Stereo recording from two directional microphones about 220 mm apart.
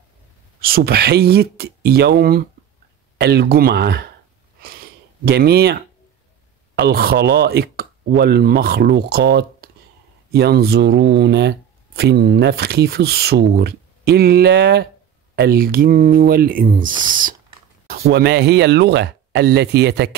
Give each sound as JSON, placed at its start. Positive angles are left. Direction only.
{"t": 0.6, "sound": "speech", "side_deg": -45}
{"t": 5.2, "sound": "speech", "side_deg": -45}